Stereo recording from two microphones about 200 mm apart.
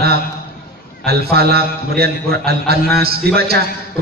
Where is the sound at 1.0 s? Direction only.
50° right (ahead or behind).